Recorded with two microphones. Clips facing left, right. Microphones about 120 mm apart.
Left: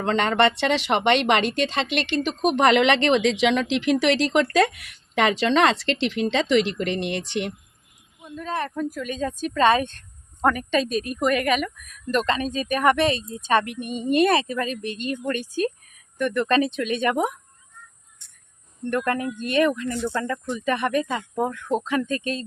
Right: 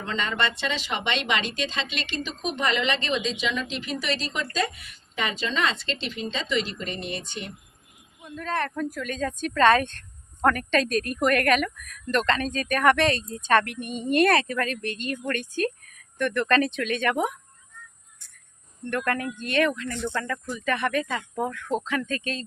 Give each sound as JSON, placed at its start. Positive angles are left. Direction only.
{"t": 0.0, "sound": "speech", "side_deg": 65}
{"t": 8.2, "sound": "a woman's voice", "side_deg": 10}
{"t": 18.9, "sound": "a woman's voice", "side_deg": 20}
{"t": 20.2, "sound": "speech", "side_deg": 25}